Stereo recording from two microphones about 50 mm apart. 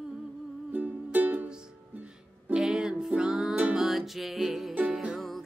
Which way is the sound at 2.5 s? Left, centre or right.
Centre.